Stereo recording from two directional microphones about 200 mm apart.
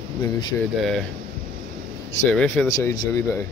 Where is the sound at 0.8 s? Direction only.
Centre (ahead or behind).